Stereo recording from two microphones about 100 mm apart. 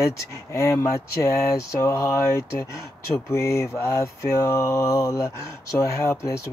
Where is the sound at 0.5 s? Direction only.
30° left (ahead or behind).